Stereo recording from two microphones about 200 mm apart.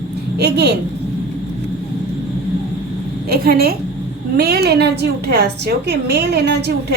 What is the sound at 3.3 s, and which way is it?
A woman's voice, 50° right (ahead or behind).